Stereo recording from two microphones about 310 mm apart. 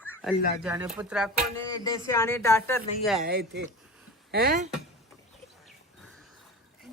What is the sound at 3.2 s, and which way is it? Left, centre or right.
Speech, right.